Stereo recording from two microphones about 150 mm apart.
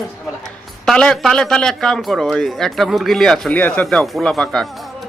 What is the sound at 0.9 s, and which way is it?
A man's voice, 5° left (ahead or behind).